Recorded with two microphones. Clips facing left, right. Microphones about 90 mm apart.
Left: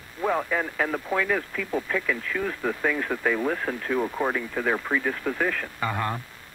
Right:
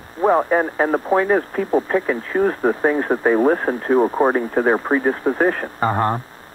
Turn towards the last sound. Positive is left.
turn(degrees=-40)  # may be behind; listen again after turning